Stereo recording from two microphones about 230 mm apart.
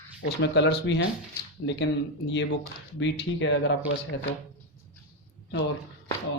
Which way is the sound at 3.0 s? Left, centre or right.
Left.